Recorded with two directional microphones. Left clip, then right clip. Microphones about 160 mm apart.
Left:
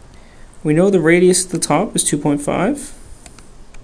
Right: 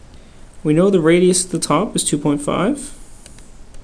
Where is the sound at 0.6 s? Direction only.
15° left (ahead or behind).